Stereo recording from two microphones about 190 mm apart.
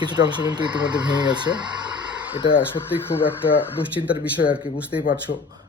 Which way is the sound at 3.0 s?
10° left (ahead or behind).